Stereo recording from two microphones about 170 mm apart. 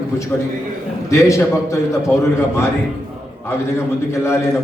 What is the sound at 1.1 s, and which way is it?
A man's voice, 15° left (ahead or behind).